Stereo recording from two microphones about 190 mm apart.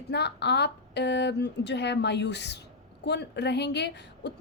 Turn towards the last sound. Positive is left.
turn(degrees=60)  # may be behind; listen again after turning